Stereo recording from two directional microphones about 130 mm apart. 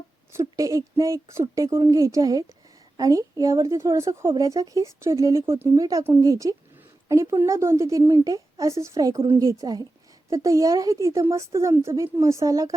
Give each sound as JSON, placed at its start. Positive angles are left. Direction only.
{"t": 0.3, "sound": "speech", "side_deg": -25}
{"t": 9.1, "sound": "a woman's voice", "side_deg": -45}
{"t": 9.4, "sound": "speech", "side_deg": -25}